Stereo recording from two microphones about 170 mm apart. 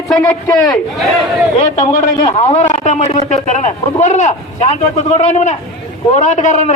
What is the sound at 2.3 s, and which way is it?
A man's voice, 40° left (ahead or behind).